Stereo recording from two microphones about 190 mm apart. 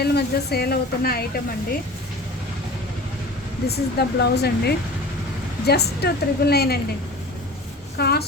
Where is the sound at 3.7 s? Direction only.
60° left (ahead or behind).